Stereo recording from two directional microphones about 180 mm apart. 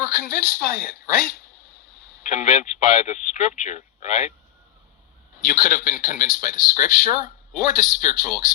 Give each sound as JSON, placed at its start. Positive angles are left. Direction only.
{"t": 0.3, "sound": "speech", "side_deg": 55}
{"t": 2.2, "sound": "speech", "side_deg": 45}
{"t": 5.4, "sound": "speech", "side_deg": 50}